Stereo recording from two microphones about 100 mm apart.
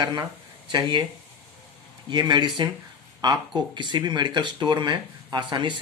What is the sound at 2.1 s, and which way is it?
Speech, 50° right (ahead or behind).